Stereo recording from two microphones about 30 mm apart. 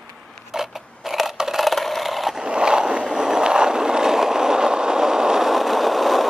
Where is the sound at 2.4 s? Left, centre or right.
Right.